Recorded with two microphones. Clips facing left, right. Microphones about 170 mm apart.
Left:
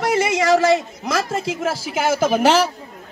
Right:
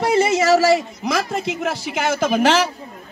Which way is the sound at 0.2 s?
15° left (ahead or behind).